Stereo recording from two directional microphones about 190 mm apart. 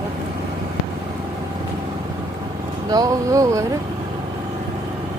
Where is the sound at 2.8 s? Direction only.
20° right (ahead or behind).